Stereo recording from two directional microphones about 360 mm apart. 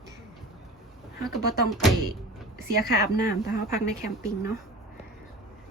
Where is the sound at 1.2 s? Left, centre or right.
Centre.